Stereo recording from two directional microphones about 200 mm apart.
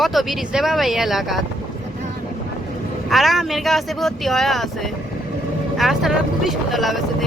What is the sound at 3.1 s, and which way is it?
Speech, centre (ahead or behind).